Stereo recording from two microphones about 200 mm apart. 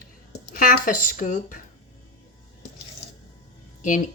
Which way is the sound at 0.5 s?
45° left (ahead or behind).